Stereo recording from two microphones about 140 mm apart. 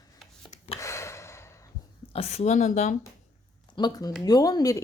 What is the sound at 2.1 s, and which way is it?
Speech, 50° left (ahead or behind).